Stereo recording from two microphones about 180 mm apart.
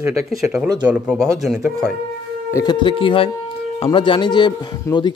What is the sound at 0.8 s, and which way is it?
A man's voice, 5° right (ahead or behind).